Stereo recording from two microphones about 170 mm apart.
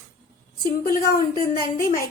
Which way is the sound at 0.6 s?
55° left (ahead or behind).